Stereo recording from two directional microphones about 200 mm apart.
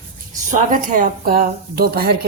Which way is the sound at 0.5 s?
40° right (ahead or behind).